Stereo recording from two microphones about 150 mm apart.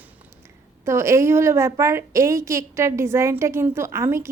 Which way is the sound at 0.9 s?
20° right (ahead or behind).